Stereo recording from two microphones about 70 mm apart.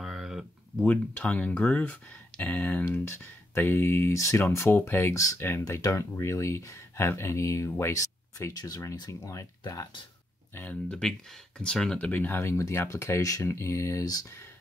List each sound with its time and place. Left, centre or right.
0.0 s a sound: centre
0.8 s speech: left
3.5 s speech: left
4.7 s speech: left
5.1 s speech: left
5.4 s speech: left
10.5 s speech: left
10.9 s speech: centre
12.0 s speech: left